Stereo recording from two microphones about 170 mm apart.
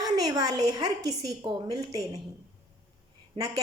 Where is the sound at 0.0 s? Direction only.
20° right (ahead or behind).